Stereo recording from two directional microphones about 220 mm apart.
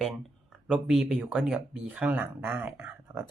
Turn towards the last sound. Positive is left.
turn(degrees=-10)  # may be behind; listen again after turning